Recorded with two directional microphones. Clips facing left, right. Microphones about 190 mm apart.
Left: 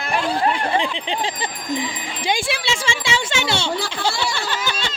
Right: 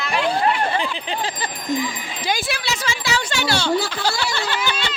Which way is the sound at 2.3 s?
25° left (ahead or behind).